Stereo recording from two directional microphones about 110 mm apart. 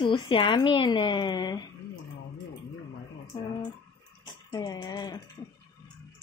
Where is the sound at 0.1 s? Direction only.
50° left (ahead or behind).